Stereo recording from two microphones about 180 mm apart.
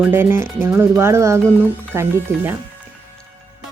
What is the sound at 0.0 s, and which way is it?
Speech, 10° right (ahead or behind).